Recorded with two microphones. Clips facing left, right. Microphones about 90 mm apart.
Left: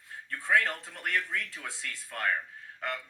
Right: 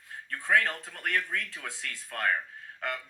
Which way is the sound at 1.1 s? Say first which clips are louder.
Right 1 dB; 45° right (ahead or behind).